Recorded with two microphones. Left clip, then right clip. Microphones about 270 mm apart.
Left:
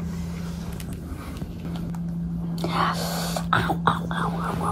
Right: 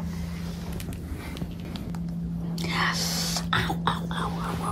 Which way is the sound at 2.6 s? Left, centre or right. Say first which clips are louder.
Left 2 dB; centre.